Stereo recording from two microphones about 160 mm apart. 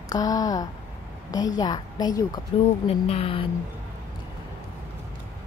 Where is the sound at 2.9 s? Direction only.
40° left (ahead or behind).